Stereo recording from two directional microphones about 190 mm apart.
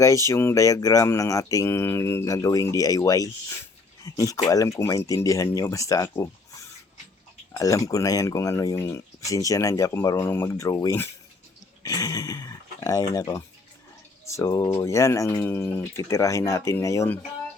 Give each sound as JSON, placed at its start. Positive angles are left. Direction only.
{"t": 0.0, "sound": "speech", "side_deg": 15}